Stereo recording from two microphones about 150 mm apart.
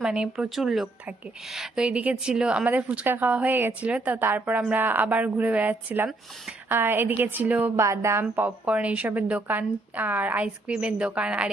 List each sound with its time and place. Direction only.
0.0 s a woman's voice: 5° right (ahead or behind)